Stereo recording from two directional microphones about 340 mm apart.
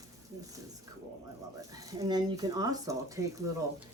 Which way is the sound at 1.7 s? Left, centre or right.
Centre.